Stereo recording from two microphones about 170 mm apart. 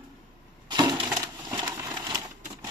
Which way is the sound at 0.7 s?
25° right (ahead or behind).